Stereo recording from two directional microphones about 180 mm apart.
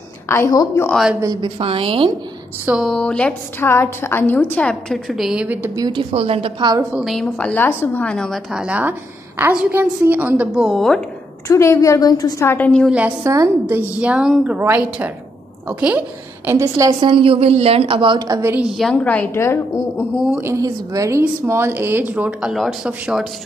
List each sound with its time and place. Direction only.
0.3 s a woman's voice: 20° left (ahead or behind)
0.8 s a woman's voice: centre (ahead or behind)
1.2 s a woman's voice: 25° right (ahead or behind)
2.6 s a woman's voice: 5° right (ahead or behind)
5.8 s a woman's voice: 25° right (ahead or behind)
6.9 s a woman's voice: centre (ahead or behind)
11.4 s a woman's voice: 15° left (ahead or behind)
12.9 s a woman's voice: 15° right (ahead or behind)
18.8 s a woman's voice: 5° left (ahead or behind)
20.2 s a woman's voice: 10° right (ahead or behind)